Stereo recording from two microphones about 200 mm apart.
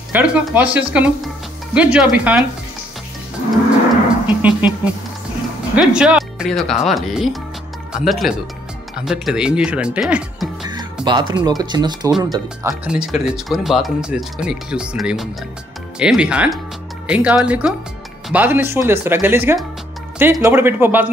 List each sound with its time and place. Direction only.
0.1 s speech: 5° right (ahead or behind)
4.4 s speech: 5° right (ahead or behind)
5.8 s speech: 5° right (ahead or behind)
11.1 s speech: 20° right (ahead or behind)
12.8 s speech: 5° right (ahead or behind)